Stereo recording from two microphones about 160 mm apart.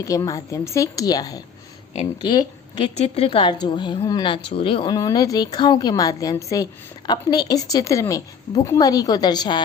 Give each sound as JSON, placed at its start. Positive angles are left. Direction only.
{"t": 0.0, "sound": "a woman's voice", "side_deg": 20}
{"t": 4.9, "sound": "a woman's voice", "side_deg": 20}